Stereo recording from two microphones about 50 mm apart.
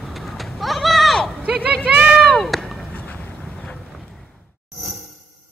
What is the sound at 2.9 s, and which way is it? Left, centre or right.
Boat, left.